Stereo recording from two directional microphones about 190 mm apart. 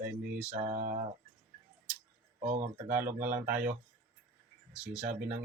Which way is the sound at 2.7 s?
10° right (ahead or behind).